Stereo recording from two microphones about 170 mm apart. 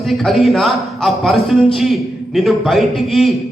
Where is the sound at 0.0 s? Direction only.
Centre (ahead or behind).